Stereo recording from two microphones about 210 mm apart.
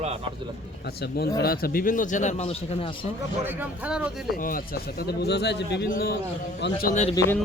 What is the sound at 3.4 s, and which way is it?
Speech, 10° right (ahead or behind).